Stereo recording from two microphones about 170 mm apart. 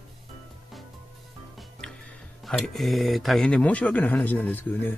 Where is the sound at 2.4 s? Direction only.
Centre (ahead or behind).